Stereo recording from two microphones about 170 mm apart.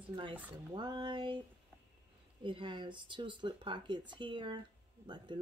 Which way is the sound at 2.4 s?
30° right (ahead or behind).